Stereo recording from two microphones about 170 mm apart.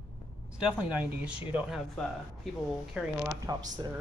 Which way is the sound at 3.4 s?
20° right (ahead or behind).